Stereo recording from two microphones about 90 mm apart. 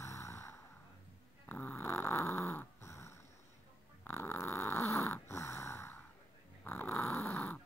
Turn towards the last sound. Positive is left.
turn(degrees=30)  # may be behind; listen again after turning